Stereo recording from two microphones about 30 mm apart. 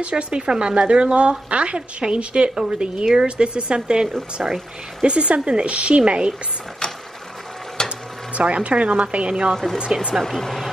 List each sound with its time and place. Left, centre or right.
0.1 s a woman's voice: right
7.8 s mechanisms: left
8.4 s a woman's voice: right
9.3 s a woman's voice: right
10.2 s speech: centre